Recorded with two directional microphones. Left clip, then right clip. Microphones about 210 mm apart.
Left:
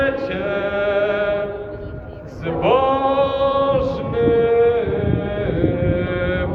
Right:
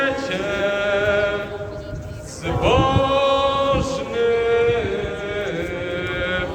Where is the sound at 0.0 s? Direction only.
50° left (ahead or behind).